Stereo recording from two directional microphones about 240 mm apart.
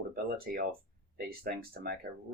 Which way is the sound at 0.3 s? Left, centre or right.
Right.